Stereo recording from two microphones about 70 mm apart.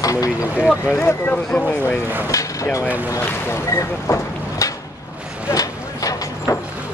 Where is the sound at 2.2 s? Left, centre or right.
Left.